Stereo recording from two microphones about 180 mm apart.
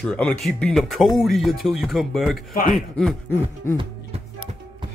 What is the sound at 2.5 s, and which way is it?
Speech, 50° left (ahead or behind).